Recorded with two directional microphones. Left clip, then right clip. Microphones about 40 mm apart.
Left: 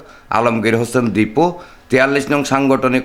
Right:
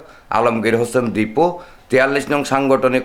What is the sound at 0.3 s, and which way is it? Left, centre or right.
A man's voice, left.